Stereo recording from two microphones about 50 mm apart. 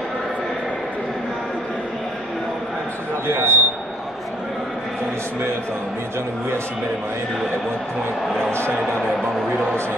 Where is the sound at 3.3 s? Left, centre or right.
Right.